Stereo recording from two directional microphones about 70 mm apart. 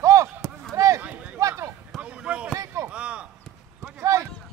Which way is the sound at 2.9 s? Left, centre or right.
Centre.